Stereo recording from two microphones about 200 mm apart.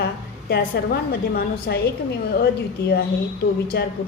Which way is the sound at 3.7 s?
55° left (ahead or behind).